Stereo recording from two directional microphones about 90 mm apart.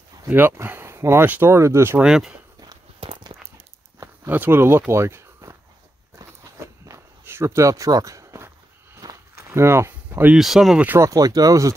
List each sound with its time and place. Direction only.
0.3 s speech: 25° right (ahead or behind)
2.0 s speech: 5° right (ahead or behind)
3.0 s a sound: 90° right
4.3 s speech: 25° right (ahead or behind)
6.9 s walk: 30° right (ahead or behind); by 9.2 s 45° right (ahead or behind)
9.5 s speech: 30° right (ahead or behind)
10.3 s speech: centre (ahead or behind)
11.0 s speech: 40° right (ahead or behind)